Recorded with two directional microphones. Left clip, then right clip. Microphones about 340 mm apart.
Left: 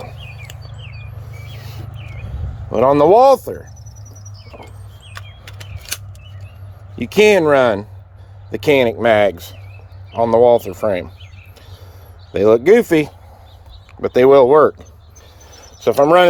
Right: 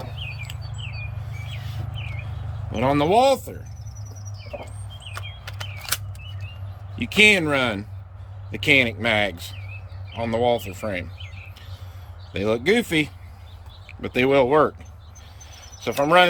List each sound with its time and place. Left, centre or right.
2.7 s speech: centre
7.0 s speech: centre
12.3 s speech: centre
15.5 s cricket: centre